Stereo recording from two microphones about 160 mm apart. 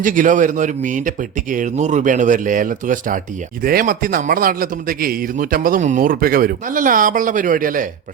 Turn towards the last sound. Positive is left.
turn(degrees=-55)  # may be behind; listen again after turning